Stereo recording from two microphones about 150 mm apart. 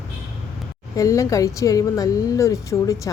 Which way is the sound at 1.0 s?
20° left (ahead or behind).